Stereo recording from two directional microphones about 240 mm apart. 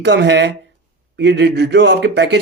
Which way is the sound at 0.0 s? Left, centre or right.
Right.